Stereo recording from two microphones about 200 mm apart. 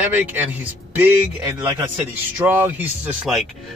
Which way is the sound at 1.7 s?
10° right (ahead or behind).